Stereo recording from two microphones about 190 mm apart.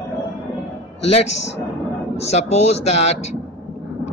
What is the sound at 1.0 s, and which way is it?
Speech, 35° left (ahead or behind).